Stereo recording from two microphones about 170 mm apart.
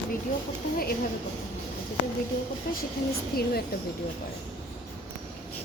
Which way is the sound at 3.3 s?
60° left (ahead or behind).